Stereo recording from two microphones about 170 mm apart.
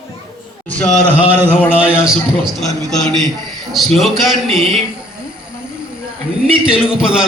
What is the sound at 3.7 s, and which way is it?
Speech, centre (ahead or behind).